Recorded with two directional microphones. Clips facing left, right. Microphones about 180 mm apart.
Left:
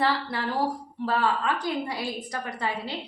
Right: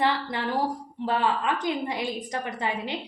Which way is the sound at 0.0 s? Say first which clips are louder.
Even; 20° right (ahead or behind).